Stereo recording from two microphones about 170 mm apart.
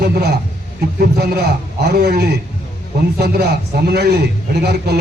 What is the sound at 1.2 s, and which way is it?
A man's voice, 75° right (ahead or behind).